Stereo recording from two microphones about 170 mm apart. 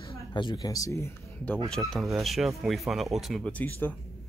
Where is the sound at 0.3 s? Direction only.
30° left (ahead or behind).